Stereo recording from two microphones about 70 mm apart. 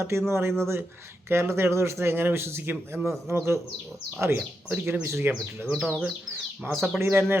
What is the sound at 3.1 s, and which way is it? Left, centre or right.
Speech, right.